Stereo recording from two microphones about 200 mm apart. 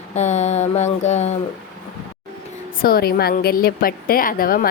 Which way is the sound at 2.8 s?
50° left (ahead or behind).